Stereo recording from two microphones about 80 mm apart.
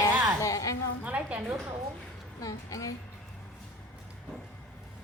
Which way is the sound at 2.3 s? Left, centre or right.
Left.